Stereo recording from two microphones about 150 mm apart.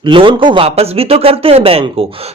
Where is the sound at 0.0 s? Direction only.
35° right (ahead or behind).